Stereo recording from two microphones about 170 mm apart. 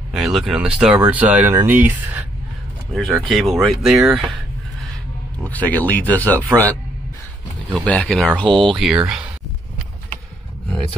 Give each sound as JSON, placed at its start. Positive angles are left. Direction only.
{"t": 0.1, "sound": "speech", "side_deg": 0}
{"t": 5.5, "sound": "speech", "side_deg": 10}
{"t": 7.8, "sound": "speech", "side_deg": 5}
{"t": 8.5, "sound": "speech", "side_deg": -30}
{"t": 8.7, "sound": "speech", "side_deg": 0}